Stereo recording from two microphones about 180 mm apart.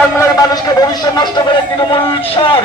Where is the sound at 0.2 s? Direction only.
20° left (ahead or behind).